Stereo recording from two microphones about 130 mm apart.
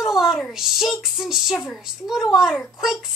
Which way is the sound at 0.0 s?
5° right (ahead or behind).